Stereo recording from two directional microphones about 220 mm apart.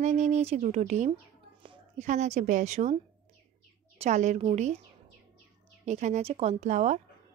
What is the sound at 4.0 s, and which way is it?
Speech, 30° right (ahead or behind).